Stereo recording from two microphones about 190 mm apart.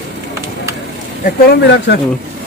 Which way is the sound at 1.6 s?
65° left (ahead or behind).